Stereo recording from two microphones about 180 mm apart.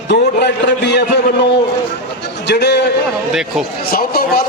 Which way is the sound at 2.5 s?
65° left (ahead or behind).